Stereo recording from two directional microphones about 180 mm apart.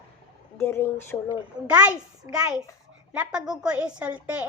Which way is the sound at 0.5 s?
15° left (ahead or behind).